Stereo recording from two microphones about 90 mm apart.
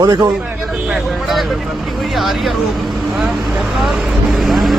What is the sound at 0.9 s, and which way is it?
Speech, centre (ahead or behind).